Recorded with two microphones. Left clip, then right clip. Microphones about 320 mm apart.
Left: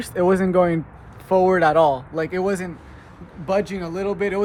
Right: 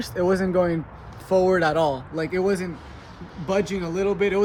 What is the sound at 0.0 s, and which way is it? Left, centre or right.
Speech, left.